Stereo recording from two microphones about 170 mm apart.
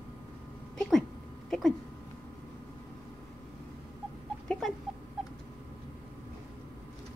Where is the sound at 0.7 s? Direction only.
5° left (ahead or behind).